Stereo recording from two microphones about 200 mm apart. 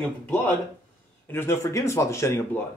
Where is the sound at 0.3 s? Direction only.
10° left (ahead or behind).